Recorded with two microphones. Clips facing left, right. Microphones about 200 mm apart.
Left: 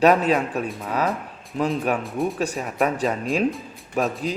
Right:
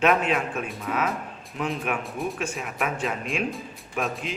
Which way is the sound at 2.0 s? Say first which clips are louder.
Left 5 dB; centre (ahead or behind).